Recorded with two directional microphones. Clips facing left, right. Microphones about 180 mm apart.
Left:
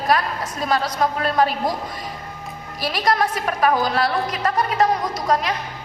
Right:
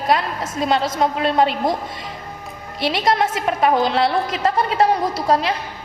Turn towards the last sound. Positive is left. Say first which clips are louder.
# right 2 dB
turn(degrees=-30)  # may be behind; listen again after turning